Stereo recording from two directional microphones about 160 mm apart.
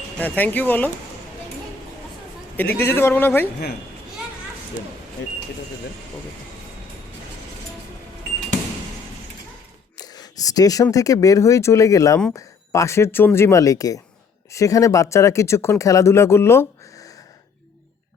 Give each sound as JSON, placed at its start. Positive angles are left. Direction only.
{"t": 0.2, "sound": "a man's voice", "side_deg": 10}
{"t": 2.6, "sound": "a man's voice", "side_deg": 10}
{"t": 10.0, "sound": "a sound", "side_deg": 25}
{"t": 10.9, "sound": "speech", "side_deg": 20}